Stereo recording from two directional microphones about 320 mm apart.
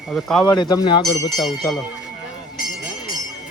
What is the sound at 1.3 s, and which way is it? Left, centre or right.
Speech, centre.